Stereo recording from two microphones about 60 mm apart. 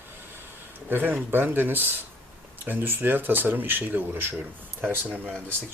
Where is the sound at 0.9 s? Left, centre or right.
Right.